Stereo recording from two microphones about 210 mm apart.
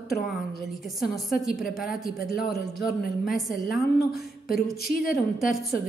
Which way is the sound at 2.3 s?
50° left (ahead or behind).